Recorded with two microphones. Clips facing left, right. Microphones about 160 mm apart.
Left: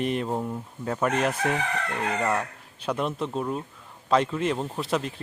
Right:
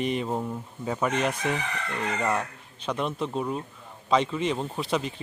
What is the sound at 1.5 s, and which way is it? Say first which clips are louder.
Chicken: left 3 dB; 55° left (ahead or behind).